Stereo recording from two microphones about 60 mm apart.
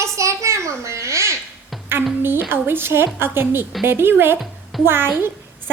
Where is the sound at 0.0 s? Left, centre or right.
Right.